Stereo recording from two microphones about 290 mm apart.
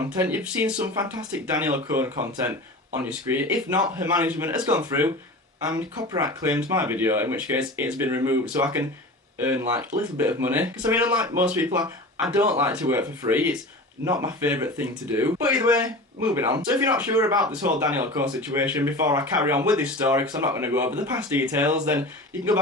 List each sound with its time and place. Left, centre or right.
0.2 s speech: centre